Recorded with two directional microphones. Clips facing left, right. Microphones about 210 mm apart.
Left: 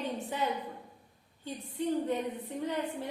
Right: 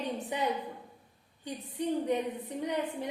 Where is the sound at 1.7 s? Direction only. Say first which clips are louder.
Right 1 dB; 15° right (ahead or behind).